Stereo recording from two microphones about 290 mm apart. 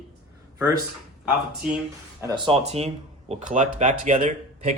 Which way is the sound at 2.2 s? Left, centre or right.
Centre.